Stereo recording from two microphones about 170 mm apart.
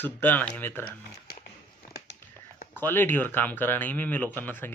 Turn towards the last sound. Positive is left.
turn(degrees=10)  # may be behind; listen again after turning